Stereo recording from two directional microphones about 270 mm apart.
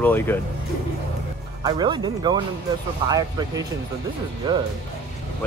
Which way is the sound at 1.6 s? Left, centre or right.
Centre.